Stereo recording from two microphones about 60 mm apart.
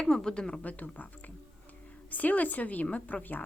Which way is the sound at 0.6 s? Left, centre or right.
Left.